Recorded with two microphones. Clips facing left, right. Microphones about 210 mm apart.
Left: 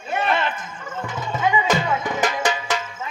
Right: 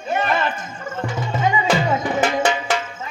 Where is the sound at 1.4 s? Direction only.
40° right (ahead or behind).